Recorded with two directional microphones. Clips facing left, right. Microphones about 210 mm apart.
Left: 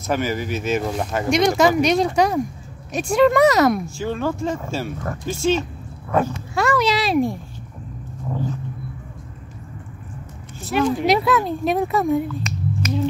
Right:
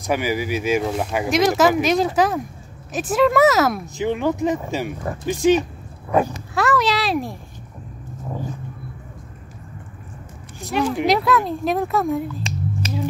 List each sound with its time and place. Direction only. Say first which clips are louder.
0.0 s speech: right 1 dB; 10° right (ahead or behind)
3.8 s speech: right 3 dB; 20° right (ahead or behind)
6.5 s a sound: even; centre (ahead or behind)
8.3 s speech: left 3 dB; 10° right (ahead or behind)
10.7 s speech: left 1 dB; centre (ahead or behind)